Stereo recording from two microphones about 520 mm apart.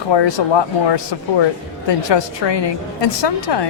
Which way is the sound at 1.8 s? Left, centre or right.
Left.